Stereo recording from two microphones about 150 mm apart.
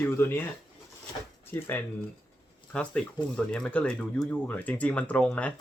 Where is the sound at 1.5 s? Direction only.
15° left (ahead or behind).